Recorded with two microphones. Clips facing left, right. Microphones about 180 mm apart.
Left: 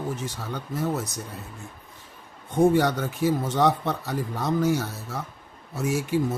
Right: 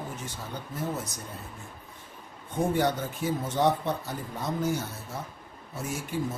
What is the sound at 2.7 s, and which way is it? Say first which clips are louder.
Speech: left 4 dB; 75° left (ahead or behind).